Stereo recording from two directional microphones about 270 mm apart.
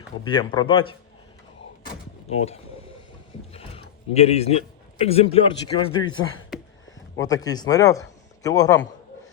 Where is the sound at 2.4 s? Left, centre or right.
Left.